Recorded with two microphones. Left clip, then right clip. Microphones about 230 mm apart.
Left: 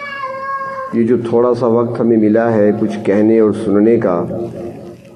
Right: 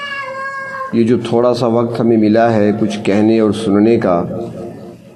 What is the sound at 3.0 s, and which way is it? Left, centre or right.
A man's voice, right.